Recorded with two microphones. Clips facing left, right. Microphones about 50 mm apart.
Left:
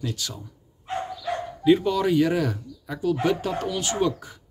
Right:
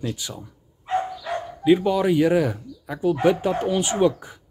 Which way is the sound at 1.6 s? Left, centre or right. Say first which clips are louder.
Right 2 dB; centre.